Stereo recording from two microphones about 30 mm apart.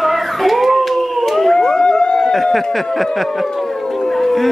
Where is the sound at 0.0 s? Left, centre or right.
Centre.